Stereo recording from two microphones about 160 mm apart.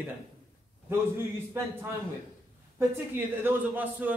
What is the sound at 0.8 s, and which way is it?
A man's voice, 15° right (ahead or behind).